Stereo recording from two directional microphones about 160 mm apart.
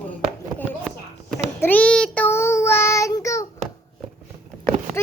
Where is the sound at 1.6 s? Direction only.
10° left (ahead or behind).